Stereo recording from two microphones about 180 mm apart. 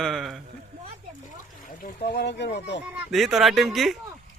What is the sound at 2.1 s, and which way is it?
Speech, 70° left (ahead or behind).